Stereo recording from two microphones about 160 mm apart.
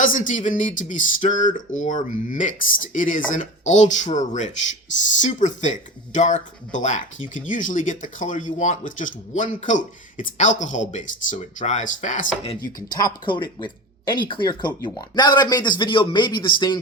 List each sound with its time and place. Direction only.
0.0 s speech: 55° left (ahead or behind)
12.6 s speech: 25° left (ahead or behind)